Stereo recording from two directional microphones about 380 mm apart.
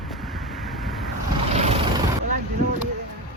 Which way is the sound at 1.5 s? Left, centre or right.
Centre.